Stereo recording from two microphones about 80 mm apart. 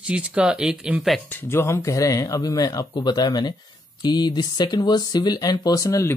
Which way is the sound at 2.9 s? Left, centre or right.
Left.